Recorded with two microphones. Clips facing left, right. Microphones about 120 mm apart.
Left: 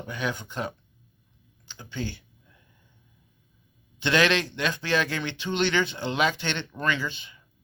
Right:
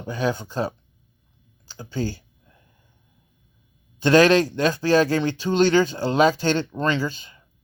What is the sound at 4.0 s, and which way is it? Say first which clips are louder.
Speech: right 8 dB; 40° right (ahead or behind).